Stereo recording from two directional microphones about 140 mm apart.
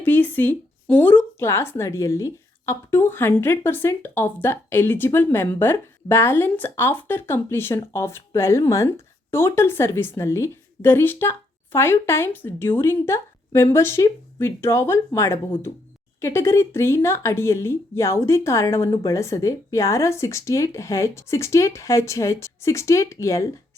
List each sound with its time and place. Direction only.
0.0 s speech: 15° left (ahead or behind)